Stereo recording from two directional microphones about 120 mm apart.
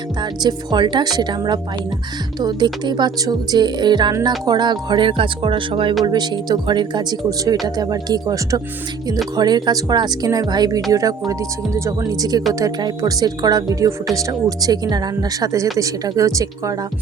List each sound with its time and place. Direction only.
0.2 s speech: 40° right (ahead or behind)
6.1 s speech: 35° right (ahead or behind)
10.9 s tuning fork: 30° right (ahead or behind)
12.5 s speech: 30° right (ahead or behind)
15.8 s tuning fork: 30° right (ahead or behind)